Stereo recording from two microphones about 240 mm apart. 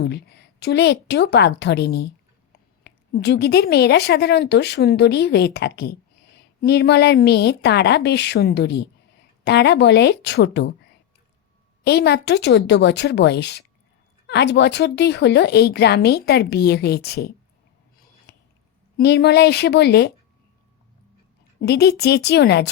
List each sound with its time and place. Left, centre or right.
0.0 s a woman's voice: left
11.8 s a woman's voice: left
18.3 s squish: left
18.9 s a woman's voice: left
21.6 s a woman's voice: left